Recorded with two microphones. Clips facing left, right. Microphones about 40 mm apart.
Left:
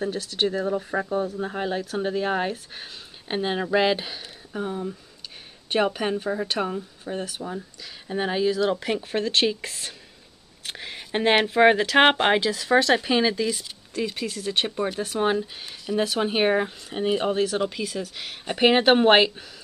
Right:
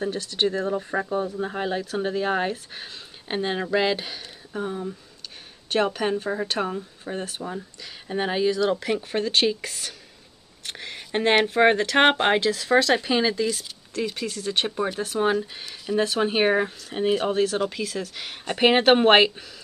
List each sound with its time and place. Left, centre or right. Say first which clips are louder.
0.0 s speech: right 1 dB; centre
8.5 s speech: right 1 dB; centre
15.5 s speech: right 1 dB; centre